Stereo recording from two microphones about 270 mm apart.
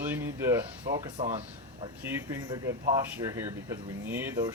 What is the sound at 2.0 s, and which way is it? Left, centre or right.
Speech, centre.